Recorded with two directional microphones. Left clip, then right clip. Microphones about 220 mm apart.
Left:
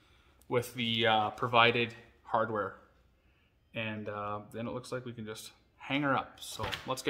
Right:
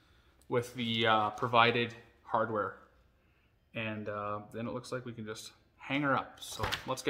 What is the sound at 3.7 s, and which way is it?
Speech, 5° left (ahead or behind).